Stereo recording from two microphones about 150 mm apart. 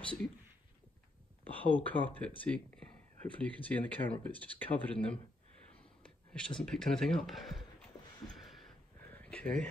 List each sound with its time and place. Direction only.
0.0 s speech: 10° left (ahead or behind)
1.6 s speech: 10° left (ahead or behind)
8.4 s a sound: centre (ahead or behind)